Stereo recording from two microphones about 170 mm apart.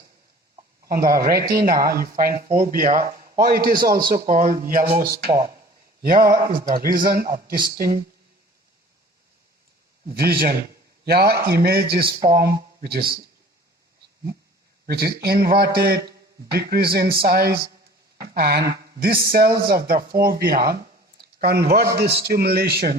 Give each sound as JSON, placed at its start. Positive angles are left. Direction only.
{"t": 0.9, "sound": "speech", "side_deg": -60}
{"t": 4.8, "sound": "speech", "side_deg": -15}
{"t": 6.0, "sound": "a sound", "side_deg": -55}
{"t": 6.4, "sound": "speech", "side_deg": -55}
{"t": 10.1, "sound": "speech", "side_deg": -65}
{"t": 14.8, "sound": "a man's voice", "side_deg": -65}